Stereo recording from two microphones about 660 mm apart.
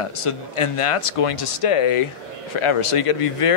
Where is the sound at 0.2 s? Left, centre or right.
Left.